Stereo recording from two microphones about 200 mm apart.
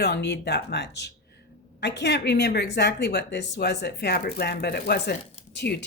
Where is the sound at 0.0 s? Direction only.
60° left (ahead or behind).